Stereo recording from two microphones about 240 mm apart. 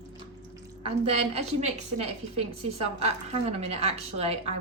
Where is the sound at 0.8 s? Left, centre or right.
Right.